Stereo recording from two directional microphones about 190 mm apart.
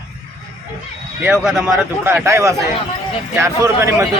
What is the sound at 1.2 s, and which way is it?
Speech, 5° right (ahead or behind).